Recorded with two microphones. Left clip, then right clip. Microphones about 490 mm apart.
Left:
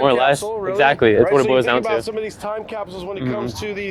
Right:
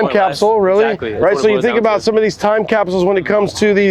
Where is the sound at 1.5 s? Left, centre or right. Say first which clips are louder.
Right 2 dB; left.